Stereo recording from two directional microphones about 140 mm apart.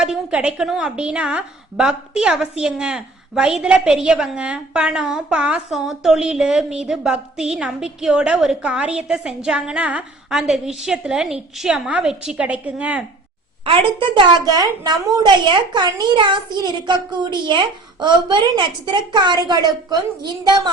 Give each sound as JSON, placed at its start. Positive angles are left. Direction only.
{"t": 0.0, "sound": "a woman's voice", "side_deg": -5}
{"t": 13.7, "sound": "a woman's voice", "side_deg": -35}